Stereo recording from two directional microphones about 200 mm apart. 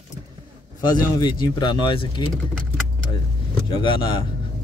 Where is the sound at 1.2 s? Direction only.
20° left (ahead or behind).